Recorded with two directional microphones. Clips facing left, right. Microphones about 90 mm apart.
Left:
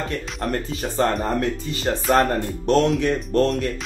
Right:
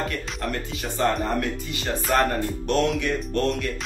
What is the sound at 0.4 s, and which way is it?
Speech, 40° left (ahead or behind).